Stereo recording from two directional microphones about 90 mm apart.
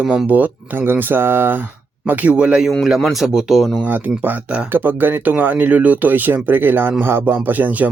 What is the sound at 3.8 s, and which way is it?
Speech, 20° right (ahead or behind).